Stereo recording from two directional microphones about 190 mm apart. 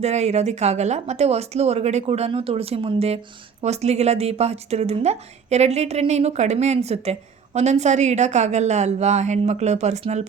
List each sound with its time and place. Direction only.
0.0 s a woman's voice: 35° right (ahead or behind)